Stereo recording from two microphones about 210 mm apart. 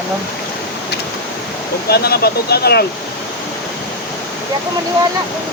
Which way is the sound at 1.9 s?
50° left (ahead or behind).